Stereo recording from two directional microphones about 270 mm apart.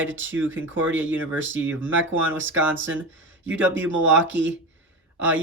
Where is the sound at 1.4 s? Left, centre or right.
Right.